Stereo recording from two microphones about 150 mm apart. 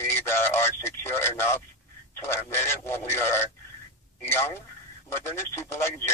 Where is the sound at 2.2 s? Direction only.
15° left (ahead or behind).